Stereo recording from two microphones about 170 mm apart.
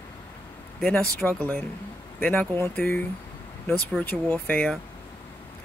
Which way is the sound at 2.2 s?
10° left (ahead or behind).